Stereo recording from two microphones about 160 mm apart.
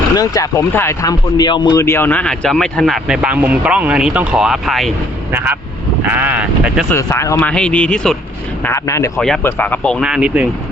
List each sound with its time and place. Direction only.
0.2 s speech: 15° left (ahead or behind)
1.8 s speech: 15° left (ahead or behind); by 4.9 s centre (ahead or behind)
5.3 s speech: 10° right (ahead or behind)
6.9 s speech: 20° left (ahead or behind)
8.6 s speech: 20° left (ahead or behind)
9.1 s speech: 5° left (ahead or behind)
10.0 s speech: 5° right (ahead or behind)